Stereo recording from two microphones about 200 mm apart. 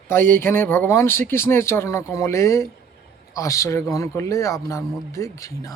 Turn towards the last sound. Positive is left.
turn(degrees=15)  # may be behind; listen again after turning